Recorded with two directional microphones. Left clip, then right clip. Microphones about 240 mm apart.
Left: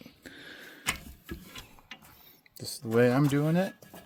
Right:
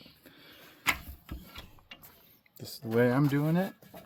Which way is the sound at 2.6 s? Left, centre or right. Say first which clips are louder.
Left 2 dB; centre.